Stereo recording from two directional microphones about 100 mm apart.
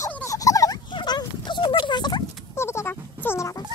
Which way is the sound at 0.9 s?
45° left (ahead or behind).